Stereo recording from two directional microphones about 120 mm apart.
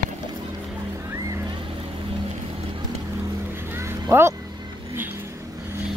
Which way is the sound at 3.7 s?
20° right (ahead or behind).